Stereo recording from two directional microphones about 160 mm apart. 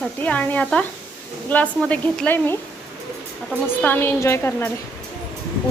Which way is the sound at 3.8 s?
10° left (ahead or behind).